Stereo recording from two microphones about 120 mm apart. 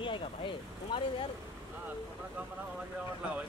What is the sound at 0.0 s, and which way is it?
Speech, 45° left (ahead or behind).